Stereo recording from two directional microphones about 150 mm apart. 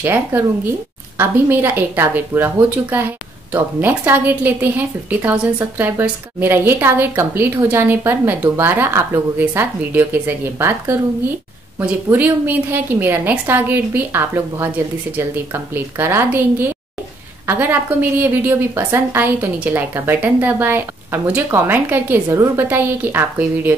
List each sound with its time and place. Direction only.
0.0 s a woman's voice: 15° right (ahead or behind)
12.1 s a woman's voice: 10° right (ahead or behind)